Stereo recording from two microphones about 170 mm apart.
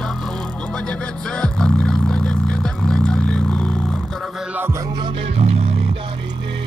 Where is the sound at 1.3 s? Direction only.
5° left (ahead or behind).